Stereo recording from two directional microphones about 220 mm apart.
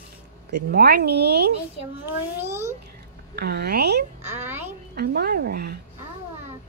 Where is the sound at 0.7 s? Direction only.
45° right (ahead or behind).